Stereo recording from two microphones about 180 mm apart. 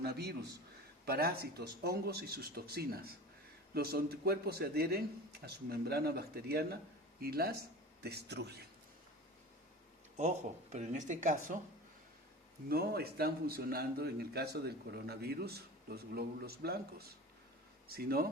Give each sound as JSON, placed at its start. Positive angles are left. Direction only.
{"t": 0.0, "sound": "a man's voice", "side_deg": -65}
{"t": 10.2, "sound": "speech", "side_deg": -40}
{"t": 12.6, "sound": "a man's voice", "side_deg": -60}